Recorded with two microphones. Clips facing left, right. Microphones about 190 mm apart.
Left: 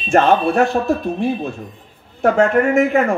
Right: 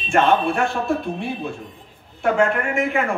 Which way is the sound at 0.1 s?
40° left (ahead or behind).